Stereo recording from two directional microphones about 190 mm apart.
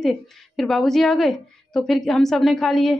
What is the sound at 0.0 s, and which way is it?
A woman's voice, centre (ahead or behind).